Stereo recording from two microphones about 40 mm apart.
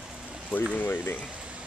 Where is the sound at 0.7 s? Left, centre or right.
Left.